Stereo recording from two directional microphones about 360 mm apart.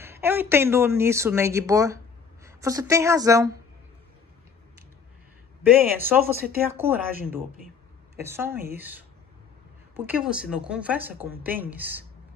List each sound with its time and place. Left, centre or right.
0.0 s speech: centre
5.6 s a woman's voice: centre
8.2 s a woman's voice: centre